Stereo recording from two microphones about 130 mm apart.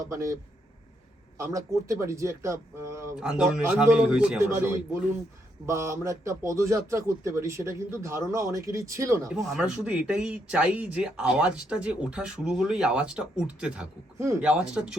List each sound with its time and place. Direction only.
0.0 s a man's voice: 25° right (ahead or behind)
1.4 s a man's voice: 25° right (ahead or behind)
3.2 s speech: 5° right (ahead or behind)
4.4 s a man's voice: 20° right (ahead or behind)
9.3 s speech: 5° right (ahead or behind)
14.2 s a man's voice: 20° right (ahead or behind)
14.4 s speech: 5° right (ahead or behind)